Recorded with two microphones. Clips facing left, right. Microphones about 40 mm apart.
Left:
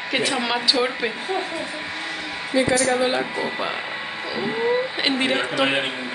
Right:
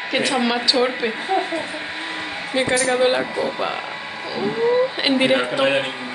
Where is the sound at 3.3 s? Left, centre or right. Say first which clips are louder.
Right 2 dB; centre.